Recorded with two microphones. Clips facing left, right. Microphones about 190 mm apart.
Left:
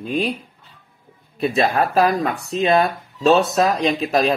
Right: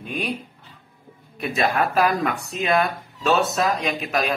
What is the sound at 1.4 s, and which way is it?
Speech, 35° left (ahead or behind).